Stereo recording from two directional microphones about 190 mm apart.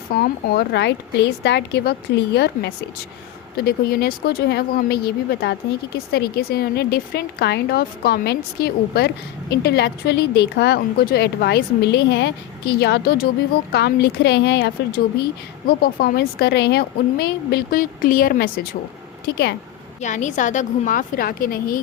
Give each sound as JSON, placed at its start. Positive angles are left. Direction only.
{"t": 0.1, "sound": "speech", "side_deg": 55}
{"t": 20.0, "sound": "a woman's voice", "side_deg": 40}